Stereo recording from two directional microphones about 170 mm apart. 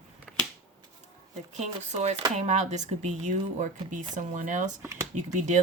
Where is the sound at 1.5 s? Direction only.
40° right (ahead or behind).